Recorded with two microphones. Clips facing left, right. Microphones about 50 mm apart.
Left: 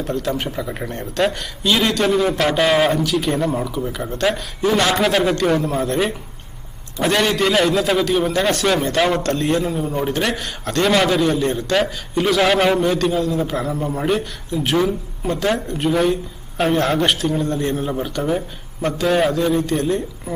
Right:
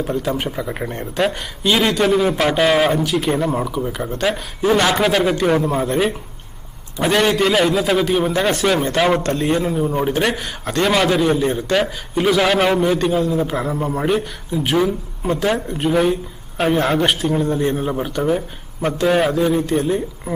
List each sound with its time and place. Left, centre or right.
0.0 s a man's voice: centre
4.6 s a man's voice: centre
4.9 s a man's voice: centre